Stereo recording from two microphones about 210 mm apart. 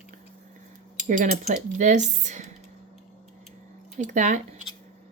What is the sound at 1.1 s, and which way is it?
Speech, 40° right (ahead or behind).